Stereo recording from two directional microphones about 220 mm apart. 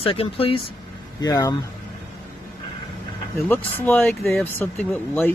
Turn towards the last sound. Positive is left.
turn(degrees=10)  # may be behind; listen again after turning